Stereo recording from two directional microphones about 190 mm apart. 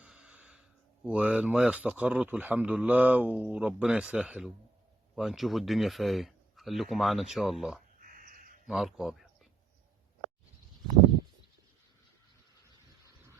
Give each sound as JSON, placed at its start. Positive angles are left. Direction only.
{"t": 0.0, "sound": "a sound", "side_deg": -5}
{"t": 1.0, "sound": "a man's voice", "side_deg": -5}
{"t": 8.0, "sound": "dog", "side_deg": -50}
{"t": 8.6, "sound": "speech", "side_deg": 0}